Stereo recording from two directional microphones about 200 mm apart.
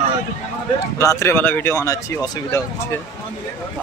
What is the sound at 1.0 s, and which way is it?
Speech, 15° left (ahead or behind).